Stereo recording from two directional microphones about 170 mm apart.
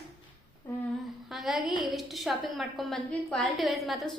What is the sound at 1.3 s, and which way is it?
A woman's voice, centre (ahead or behind).